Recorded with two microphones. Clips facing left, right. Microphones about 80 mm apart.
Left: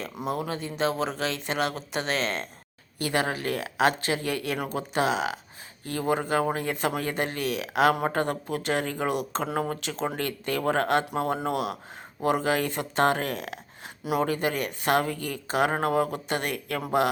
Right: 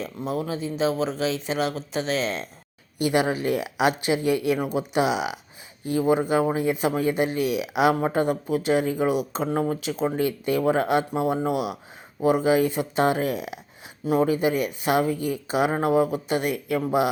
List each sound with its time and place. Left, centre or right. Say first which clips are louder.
0.3 s a man's voice: right 3 dB; centre
3.1 s a man's voice: right 4 dB; centre